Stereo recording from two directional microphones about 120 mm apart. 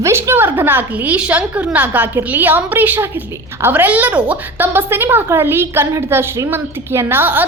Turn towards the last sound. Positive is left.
turn(degrees=-15)  # may be behind; listen again after turning